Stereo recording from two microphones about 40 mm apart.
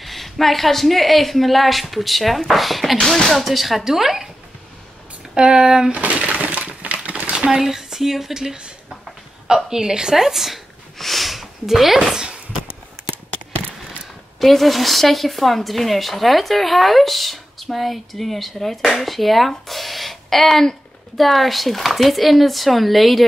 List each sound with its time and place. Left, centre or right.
0.0 s speech: centre
5.3 s speech: right
5.9 s speech: right
6.4 s a sound: right
7.6 s speech: centre
9.7 s speech: centre
11.0 s a sound: centre
14.4 s speech: centre